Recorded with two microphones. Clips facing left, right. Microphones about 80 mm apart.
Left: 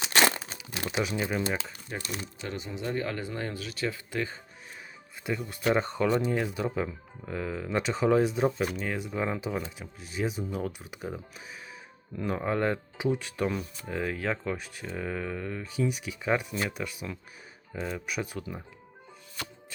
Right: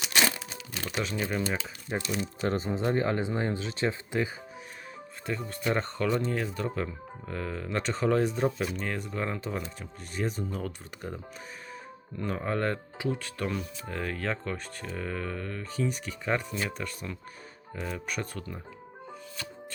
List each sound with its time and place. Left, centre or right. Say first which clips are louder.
0.1 s crumpling: left 3 dB; left
0.7 s speech: left 2 dB; centre
1.9 s speech: right 5 dB; right
2.5 s speech: right 5 dB; right
5.5 s speech: left 4 dB; centre
13.5 s speech: left 1 dB; centre